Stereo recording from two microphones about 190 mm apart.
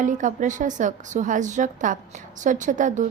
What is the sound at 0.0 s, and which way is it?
A woman's voice, 40° right (ahead or behind).